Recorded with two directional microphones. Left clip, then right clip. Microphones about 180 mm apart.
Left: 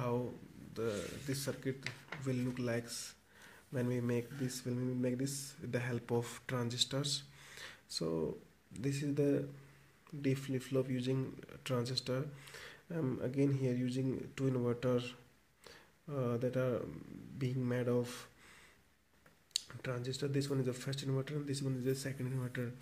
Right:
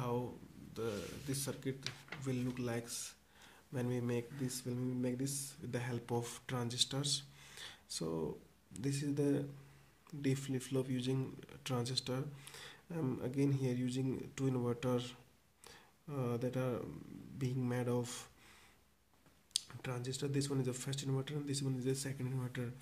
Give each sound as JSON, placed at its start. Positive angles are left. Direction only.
{"t": 0.7, "sound": "speech", "side_deg": 15}
{"t": 15.6, "sound": "a sound", "side_deg": 5}
{"t": 17.4, "sound": "speech", "side_deg": 10}
{"t": 19.7, "sound": "speech", "side_deg": 10}